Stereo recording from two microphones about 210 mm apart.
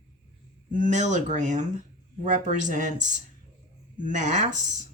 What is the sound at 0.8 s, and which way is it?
Speech, 35° right (ahead or behind).